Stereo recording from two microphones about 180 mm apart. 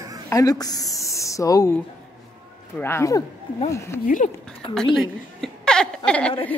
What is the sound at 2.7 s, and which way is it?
Speech, 15° left (ahead or behind).